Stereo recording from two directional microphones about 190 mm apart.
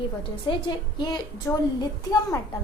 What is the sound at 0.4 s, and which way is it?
Speech, 25° left (ahead or behind).